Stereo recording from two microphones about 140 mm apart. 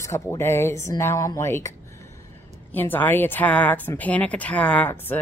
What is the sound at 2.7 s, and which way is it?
Speech, 15° left (ahead or behind).